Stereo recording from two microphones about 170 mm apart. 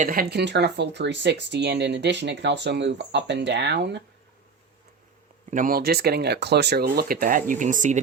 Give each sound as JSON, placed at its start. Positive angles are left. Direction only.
{"t": 0.0, "sound": "speech", "side_deg": -55}
{"t": 5.5, "sound": "speech", "side_deg": -50}